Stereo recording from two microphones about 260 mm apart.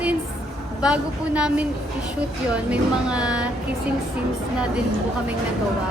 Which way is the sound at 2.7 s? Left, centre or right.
Centre.